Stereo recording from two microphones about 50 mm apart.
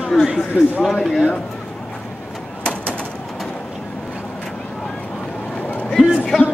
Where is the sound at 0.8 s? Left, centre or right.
Centre.